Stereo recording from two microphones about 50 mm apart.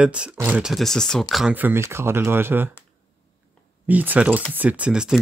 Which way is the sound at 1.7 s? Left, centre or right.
Right.